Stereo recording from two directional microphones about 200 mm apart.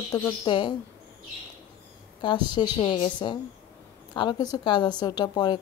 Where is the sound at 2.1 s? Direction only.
25° left (ahead or behind).